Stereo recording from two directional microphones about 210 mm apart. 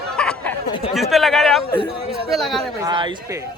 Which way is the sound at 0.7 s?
25° left (ahead or behind).